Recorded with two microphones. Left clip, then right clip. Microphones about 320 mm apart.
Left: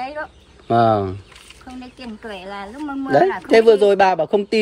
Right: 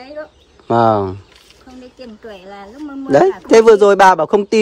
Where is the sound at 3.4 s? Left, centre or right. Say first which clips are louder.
Right 5 dB; right.